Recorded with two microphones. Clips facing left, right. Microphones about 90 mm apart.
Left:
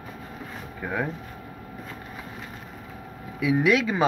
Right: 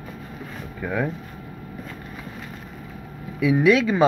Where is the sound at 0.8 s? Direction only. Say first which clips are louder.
Right 3 dB; 15° left (ahead or behind).